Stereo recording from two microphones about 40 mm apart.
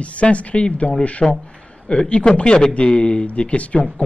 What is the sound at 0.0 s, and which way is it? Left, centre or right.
Speech, left.